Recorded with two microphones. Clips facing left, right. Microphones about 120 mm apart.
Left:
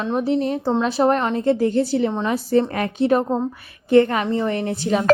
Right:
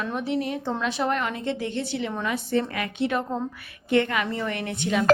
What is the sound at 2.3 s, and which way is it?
Speech, 35° left (ahead or behind).